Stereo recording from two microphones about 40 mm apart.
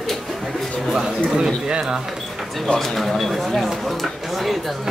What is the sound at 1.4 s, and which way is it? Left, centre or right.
Speech, centre.